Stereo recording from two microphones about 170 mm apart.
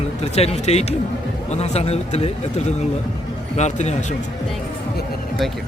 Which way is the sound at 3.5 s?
40° left (ahead or behind).